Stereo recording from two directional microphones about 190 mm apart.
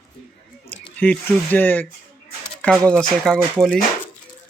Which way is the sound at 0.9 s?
5° left (ahead or behind).